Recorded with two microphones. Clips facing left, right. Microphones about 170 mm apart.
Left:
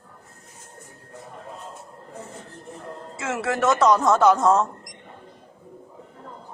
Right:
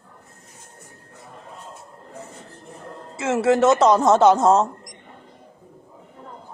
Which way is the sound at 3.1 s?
25° right (ahead or behind).